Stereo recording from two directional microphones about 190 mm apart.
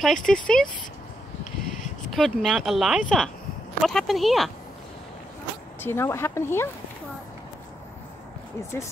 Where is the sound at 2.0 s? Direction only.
Centre (ahead or behind).